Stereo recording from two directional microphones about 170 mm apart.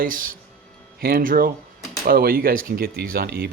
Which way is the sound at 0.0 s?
55° right (ahead or behind).